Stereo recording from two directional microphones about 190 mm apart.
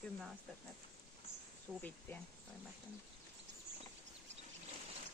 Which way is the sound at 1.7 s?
10° right (ahead or behind).